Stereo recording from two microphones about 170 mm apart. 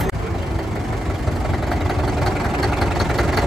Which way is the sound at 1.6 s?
Centre (ahead or behind).